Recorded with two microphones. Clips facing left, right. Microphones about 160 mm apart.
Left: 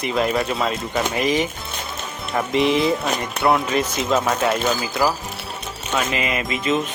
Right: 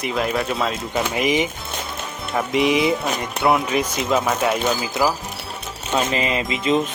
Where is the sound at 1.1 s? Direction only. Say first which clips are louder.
Right 1 dB; 20° right (ahead or behind).